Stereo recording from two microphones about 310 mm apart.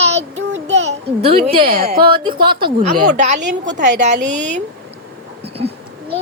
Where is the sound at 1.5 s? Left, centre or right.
Centre.